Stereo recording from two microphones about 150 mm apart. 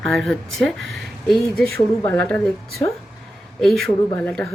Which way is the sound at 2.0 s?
10° left (ahead or behind).